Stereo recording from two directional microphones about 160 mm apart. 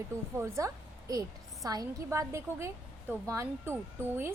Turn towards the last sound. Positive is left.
turn(degrees=-15)  # may be behind; listen again after turning